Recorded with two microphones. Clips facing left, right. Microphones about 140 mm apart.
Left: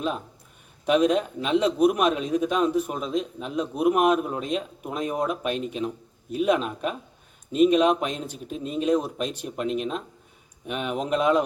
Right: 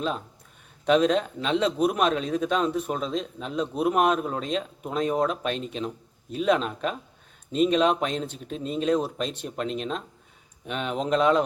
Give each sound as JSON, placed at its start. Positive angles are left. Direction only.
{"t": 0.9, "sound": "speech", "side_deg": 10}